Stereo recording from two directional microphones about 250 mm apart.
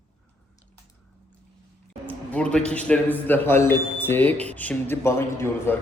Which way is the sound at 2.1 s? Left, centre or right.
Centre.